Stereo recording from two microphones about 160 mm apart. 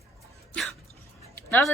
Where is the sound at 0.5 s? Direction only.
Centre (ahead or behind).